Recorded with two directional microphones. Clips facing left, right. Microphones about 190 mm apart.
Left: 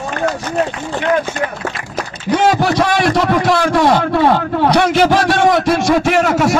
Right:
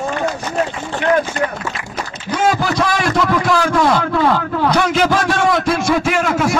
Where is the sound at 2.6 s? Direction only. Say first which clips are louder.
Left 4 dB; 70° left (ahead or behind).